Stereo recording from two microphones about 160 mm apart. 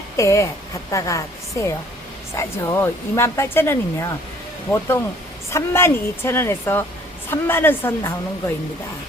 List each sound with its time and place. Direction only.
0.2 s a woman's voice: 20° left (ahead or behind)